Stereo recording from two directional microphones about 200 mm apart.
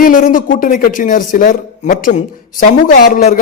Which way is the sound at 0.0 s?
45° left (ahead or behind).